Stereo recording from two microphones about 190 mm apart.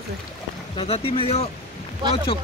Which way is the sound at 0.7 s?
30° left (ahead or behind).